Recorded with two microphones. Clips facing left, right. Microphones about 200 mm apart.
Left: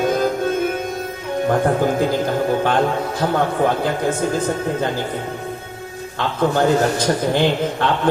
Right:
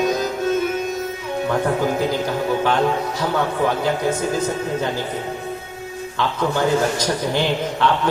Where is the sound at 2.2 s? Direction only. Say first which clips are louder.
Left 2 dB; 50° left (ahead or behind).